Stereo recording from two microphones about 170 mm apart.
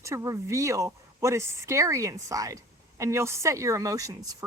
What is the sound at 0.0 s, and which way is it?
Speech, 15° right (ahead or behind).